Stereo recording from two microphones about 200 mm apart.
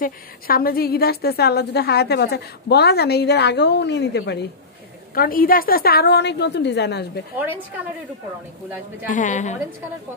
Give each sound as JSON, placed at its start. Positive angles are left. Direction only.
{"t": 0.0, "sound": "a woman's voice", "side_deg": 45}
{"t": 5.1, "sound": "a woman's voice", "side_deg": 45}
{"t": 9.1, "sound": "a woman's voice", "side_deg": 40}